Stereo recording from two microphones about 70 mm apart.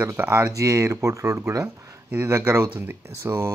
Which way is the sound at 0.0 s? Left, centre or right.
Right.